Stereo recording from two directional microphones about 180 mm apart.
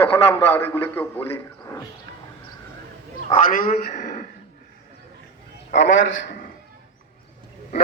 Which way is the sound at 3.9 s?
50° left (ahead or behind).